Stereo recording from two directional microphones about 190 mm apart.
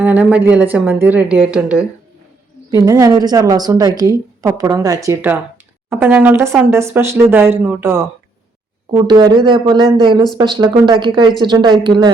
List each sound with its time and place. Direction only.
0.0 s speech: 10° right (ahead or behind)
2.6 s a woman's voice: 20° right (ahead or behind)